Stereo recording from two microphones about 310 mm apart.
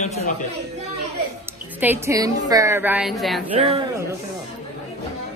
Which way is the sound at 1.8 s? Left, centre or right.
Centre.